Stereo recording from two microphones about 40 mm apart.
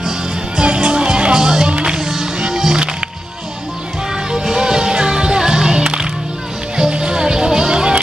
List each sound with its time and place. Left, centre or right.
0.6 s music: right
1.7 s music: right
2.0 s music: centre
4.3 s music: centre